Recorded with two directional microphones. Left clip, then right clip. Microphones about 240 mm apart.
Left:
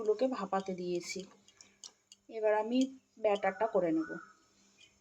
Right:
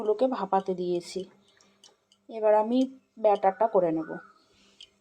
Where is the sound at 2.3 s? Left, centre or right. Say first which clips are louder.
Right 8 dB; centre.